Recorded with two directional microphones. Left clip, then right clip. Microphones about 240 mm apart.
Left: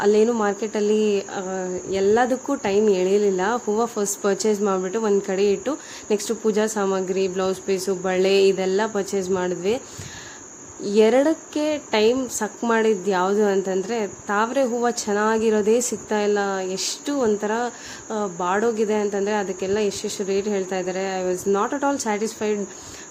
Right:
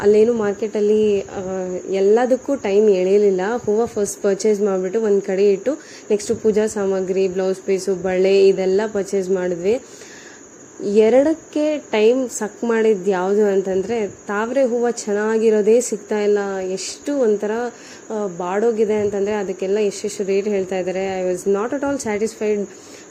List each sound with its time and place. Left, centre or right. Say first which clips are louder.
0.0 s speech: right 4 dB; centre
10.8 s speech: right 3 dB; centre